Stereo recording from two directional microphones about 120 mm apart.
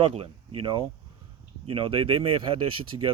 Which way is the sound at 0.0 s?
50° right (ahead or behind).